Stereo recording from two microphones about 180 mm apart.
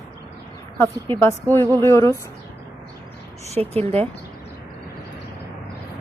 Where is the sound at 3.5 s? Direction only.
35° right (ahead or behind).